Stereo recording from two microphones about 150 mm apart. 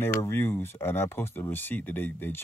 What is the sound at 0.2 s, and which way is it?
Speech, 15° left (ahead or behind).